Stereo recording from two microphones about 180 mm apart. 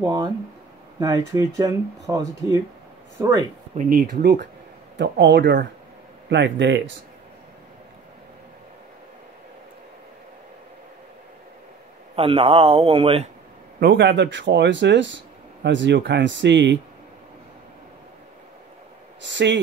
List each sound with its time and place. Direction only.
0.0 s speech: 20° right (ahead or behind)
3.9 s speech: 60° right (ahead or behind)
12.2 s speech: 30° right (ahead or behind)
13.7 s speech: 70° right (ahead or behind)
19.2 s speech: 80° right